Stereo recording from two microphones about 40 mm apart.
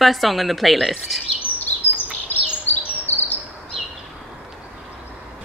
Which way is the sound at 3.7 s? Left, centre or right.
Centre.